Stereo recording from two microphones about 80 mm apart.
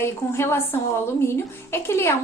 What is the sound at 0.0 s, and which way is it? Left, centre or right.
A woman's voice, left.